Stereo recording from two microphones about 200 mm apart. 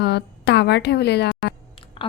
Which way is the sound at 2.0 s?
25° left (ahead or behind).